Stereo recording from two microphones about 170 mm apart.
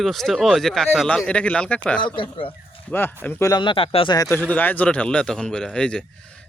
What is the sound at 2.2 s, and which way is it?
Speech, 30° left (ahead or behind).